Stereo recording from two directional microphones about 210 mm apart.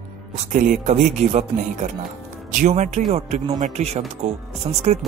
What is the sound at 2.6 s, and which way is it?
Speech, 35° right (ahead or behind).